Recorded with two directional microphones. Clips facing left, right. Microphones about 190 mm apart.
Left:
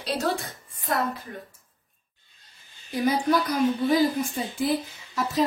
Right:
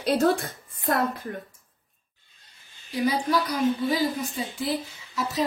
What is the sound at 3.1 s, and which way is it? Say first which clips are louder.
Speech: left 4 dB; 50° left (ahead or behind).